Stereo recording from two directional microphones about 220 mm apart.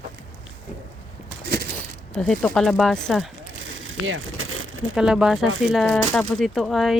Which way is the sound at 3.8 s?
65° right (ahead or behind).